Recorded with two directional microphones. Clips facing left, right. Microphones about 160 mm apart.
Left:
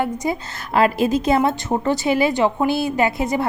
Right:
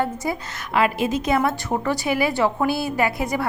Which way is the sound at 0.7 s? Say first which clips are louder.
Left 4 dB; 35° left (ahead or behind).